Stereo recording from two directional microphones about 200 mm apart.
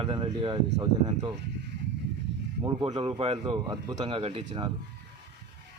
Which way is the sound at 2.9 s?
30° right (ahead or behind).